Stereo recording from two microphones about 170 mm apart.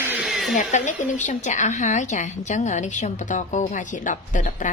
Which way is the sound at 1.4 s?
45° left (ahead or behind).